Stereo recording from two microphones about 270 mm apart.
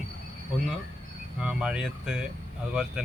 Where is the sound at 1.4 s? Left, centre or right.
Centre.